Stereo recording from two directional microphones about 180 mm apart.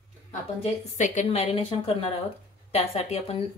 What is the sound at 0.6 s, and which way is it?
A woman's voice, 40° left (ahead or behind).